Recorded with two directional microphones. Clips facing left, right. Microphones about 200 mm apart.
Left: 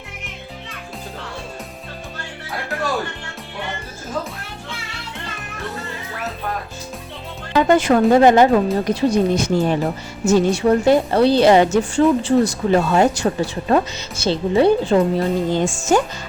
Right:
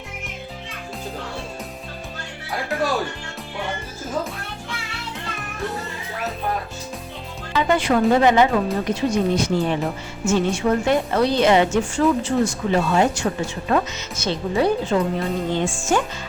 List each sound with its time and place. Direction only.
7.5 s speech: 45° left (ahead or behind)